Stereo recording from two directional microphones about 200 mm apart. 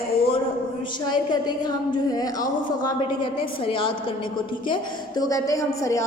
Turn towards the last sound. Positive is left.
turn(degrees=15)  # may be behind; listen again after turning